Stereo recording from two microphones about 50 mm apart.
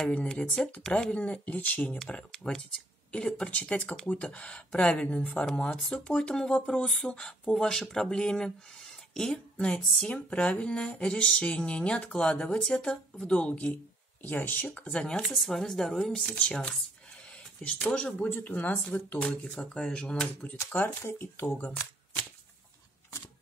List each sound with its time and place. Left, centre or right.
0.0 s speech: left
1.1 s speech: left
1.9 s speech: centre
5.8 s speech: centre
6.3 s speech: centre
15.0 s speech: centre
15.2 s speech: centre; by 16.7 s left
17.9 s speech: left
18.4 s speech: left
19.2 s speech: centre
21.0 s speech: left
21.4 s speech: left